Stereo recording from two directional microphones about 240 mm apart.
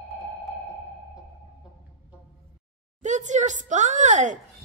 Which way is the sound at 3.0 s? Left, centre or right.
Right.